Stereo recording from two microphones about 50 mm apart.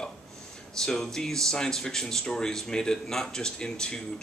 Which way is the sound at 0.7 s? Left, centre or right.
Centre.